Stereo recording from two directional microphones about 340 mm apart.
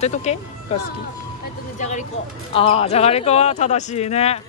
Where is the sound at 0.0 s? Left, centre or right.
Centre.